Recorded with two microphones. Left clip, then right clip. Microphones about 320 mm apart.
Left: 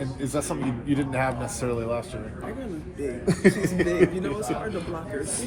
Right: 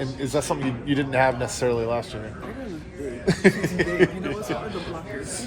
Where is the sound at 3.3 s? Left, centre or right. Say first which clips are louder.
Right 2 dB; right.